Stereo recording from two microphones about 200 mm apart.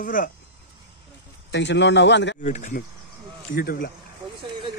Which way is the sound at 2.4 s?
40° left (ahead or behind).